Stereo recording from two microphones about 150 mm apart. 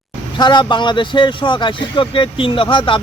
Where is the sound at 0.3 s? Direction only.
30° left (ahead or behind).